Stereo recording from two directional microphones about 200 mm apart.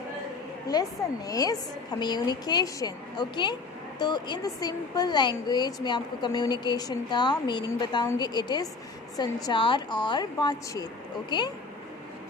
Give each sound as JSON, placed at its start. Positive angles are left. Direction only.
{"t": 0.7, "sound": "speech", "side_deg": 20}